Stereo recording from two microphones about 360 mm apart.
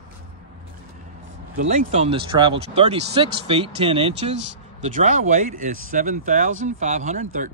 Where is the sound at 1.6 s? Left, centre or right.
Centre.